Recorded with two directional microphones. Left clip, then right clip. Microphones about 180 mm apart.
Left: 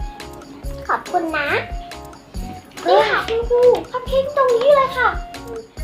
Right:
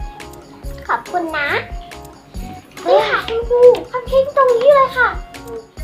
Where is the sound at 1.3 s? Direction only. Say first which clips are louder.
Right 3 dB; 20° right (ahead or behind).